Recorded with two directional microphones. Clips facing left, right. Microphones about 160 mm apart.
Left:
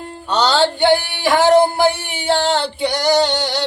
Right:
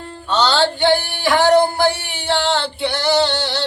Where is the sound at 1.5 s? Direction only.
25° left (ahead or behind).